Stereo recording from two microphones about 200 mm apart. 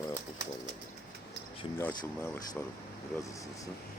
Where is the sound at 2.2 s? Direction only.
10° left (ahead or behind).